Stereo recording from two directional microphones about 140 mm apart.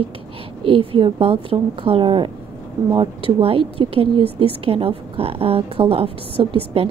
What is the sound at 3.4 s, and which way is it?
A woman's voice, 40° right (ahead or behind).